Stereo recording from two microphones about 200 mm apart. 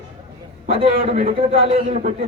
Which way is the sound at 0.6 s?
35° right (ahead or behind).